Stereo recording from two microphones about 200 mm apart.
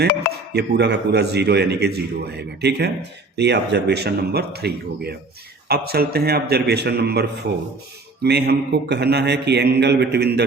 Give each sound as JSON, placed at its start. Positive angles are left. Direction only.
{"t": 0.5, "sound": "a man's voice", "side_deg": -55}